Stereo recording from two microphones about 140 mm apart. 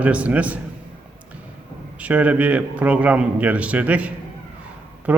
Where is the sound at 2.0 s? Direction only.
10° right (ahead or behind).